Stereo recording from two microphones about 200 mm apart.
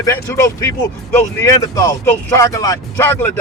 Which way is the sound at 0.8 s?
15° left (ahead or behind).